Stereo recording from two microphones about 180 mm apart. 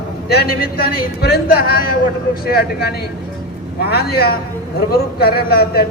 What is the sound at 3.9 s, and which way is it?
A man's voice, 60° left (ahead or behind).